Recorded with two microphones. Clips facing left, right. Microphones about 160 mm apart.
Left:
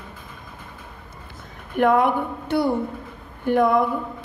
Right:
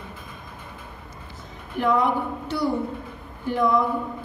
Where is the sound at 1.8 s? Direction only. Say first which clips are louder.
Left 4 dB; 55° left (ahead or behind).